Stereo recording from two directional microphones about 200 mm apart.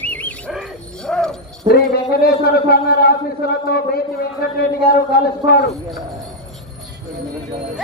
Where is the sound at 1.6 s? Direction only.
25° right (ahead or behind).